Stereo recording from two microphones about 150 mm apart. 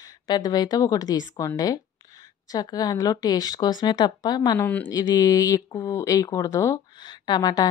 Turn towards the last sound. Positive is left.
turn(degrees=25)  # may be behind; listen again after turning